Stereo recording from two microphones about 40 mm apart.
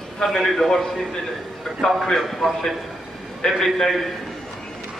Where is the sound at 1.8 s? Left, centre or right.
Centre.